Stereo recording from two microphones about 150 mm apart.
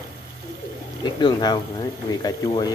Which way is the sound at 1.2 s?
30° left (ahead or behind).